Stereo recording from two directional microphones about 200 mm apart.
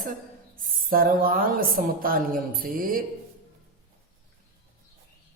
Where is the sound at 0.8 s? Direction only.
45° right (ahead or behind).